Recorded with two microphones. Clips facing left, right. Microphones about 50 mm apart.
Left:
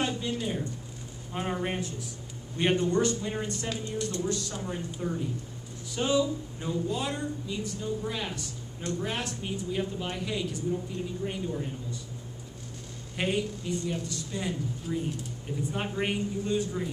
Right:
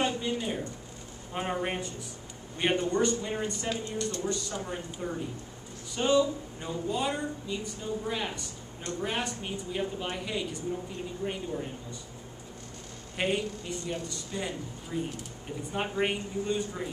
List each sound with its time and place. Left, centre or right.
0.0 s zipper: centre
1.3 s speech: centre
13.1 s speech: centre